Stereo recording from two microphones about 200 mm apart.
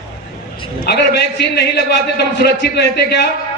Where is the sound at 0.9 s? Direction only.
55° left (ahead or behind).